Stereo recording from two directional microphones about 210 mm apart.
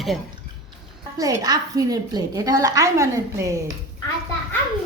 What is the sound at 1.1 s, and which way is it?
A woman's voice, 20° right (ahead or behind).